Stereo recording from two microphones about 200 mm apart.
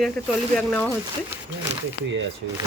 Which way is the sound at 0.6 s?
5° left (ahead or behind).